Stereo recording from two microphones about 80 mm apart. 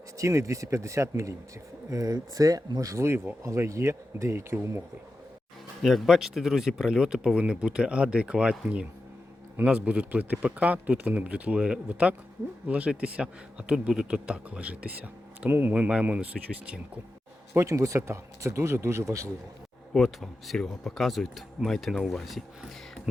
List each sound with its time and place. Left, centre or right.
0.2 s speech: right
5.8 s a man's voice: centre
9.6 s a man's voice: centre
17.5 s speech: right
19.9 s speech: centre